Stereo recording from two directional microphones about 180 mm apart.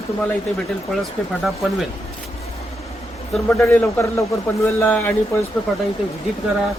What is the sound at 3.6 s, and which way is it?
A man's voice, 10° left (ahead or behind).